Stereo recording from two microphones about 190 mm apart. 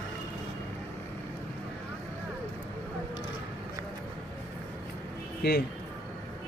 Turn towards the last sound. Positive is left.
turn(degrees=55)  # may be behind; listen again after turning